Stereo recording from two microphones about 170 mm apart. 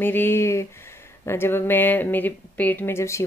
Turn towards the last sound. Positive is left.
turn(degrees=15)  # may be behind; listen again after turning